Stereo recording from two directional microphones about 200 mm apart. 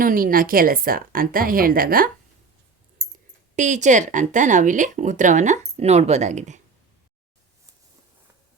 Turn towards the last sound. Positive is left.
turn(degrees=-35)  # may be behind; listen again after turning